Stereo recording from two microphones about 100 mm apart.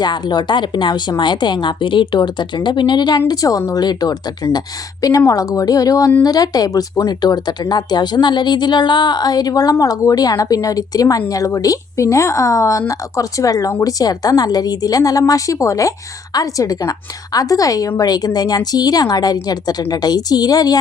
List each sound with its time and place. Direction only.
0.0 s a woman's voice: 45° left (ahead or behind)